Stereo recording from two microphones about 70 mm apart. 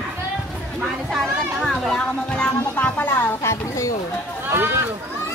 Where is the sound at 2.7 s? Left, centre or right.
Left.